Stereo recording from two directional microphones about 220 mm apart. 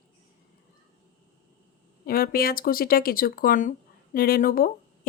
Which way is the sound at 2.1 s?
45° left (ahead or behind).